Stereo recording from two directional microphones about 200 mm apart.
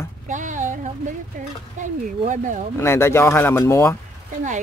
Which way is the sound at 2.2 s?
40° right (ahead or behind).